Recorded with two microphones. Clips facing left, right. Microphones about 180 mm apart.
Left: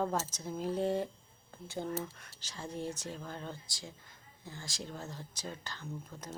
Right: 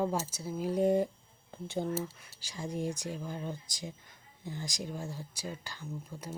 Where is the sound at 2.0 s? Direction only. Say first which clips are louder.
Right 3 dB; 5° right (ahead or behind).